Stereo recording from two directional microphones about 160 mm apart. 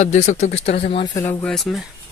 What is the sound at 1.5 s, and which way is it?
Speech, centre (ahead or behind).